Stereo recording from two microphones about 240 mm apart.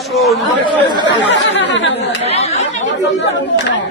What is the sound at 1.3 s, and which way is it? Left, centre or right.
Speech, left.